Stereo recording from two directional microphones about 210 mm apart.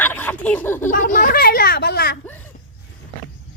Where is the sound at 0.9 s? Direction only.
40° left (ahead or behind).